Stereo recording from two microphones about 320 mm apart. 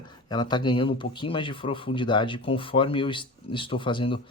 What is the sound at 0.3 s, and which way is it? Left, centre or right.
Speech, centre.